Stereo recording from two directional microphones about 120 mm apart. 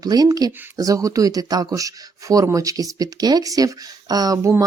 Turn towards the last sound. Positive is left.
turn(degrees=-30)  # may be behind; listen again after turning